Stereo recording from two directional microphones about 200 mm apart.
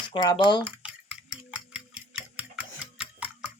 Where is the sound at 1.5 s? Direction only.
5° right (ahead or behind).